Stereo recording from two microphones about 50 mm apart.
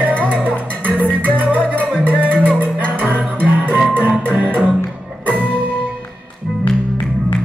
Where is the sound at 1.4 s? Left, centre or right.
Right.